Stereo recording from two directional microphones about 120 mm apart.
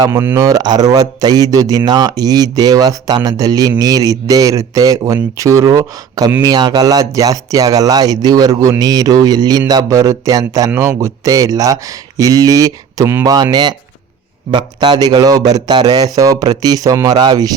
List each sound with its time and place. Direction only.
0.0 s a man's voice: 20° right (ahead or behind)